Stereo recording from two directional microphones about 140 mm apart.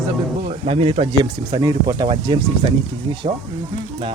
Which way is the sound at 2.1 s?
40° right (ahead or behind).